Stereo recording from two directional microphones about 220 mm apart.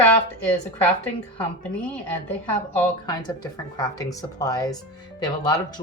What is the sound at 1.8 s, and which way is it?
Speech, 10° left (ahead or behind).